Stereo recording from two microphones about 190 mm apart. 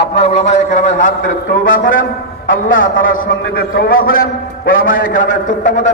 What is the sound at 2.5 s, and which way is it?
Speech, 90° left.